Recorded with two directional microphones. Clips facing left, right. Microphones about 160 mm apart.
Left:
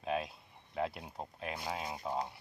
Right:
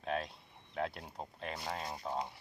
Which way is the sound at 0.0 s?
5° left (ahead or behind).